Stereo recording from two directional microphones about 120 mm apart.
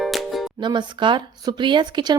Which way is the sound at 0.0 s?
Centre (ahead or behind).